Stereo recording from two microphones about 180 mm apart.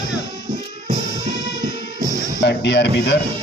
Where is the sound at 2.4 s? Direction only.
75° left (ahead or behind).